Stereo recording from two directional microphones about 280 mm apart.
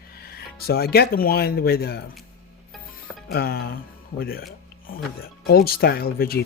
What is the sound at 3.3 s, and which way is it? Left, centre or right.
Speech, left.